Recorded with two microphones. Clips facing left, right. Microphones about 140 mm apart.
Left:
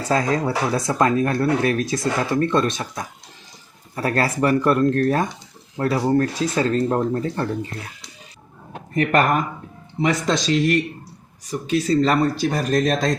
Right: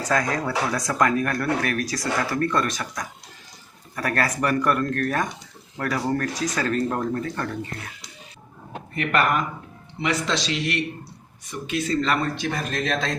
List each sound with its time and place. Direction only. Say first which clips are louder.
0.0 s speech: left 3 dB; 30° left (ahead or behind)
9.0 s speech: left 4 dB; 40° left (ahead or behind)